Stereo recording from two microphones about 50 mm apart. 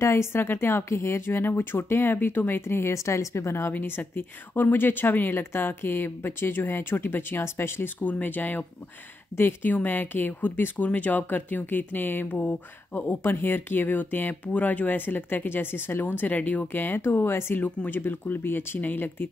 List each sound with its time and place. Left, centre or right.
0.0 s speech: left
3.7 s speech: left
5.3 s speech: left
8.0 s speech: left
16.2 s speech: left
17.0 s speech: left
17.6 s speech: left